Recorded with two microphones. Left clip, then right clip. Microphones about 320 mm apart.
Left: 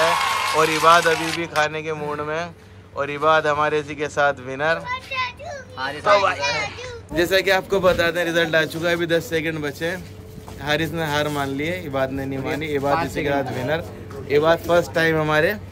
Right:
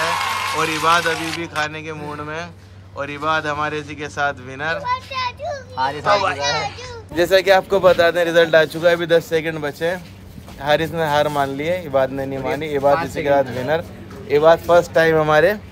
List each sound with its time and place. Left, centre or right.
0.0 s a man's voice: centre
4.8 s children playing: right
6.8 s a man's voice: centre